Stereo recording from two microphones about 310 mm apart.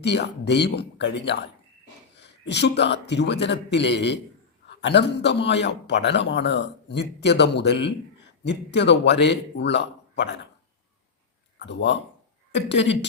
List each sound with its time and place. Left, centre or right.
0.0 s a man's voice: left
11.6 s a man's voice: left